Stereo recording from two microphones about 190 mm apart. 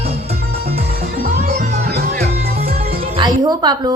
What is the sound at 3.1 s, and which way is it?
Music, 20° right (ahead or behind).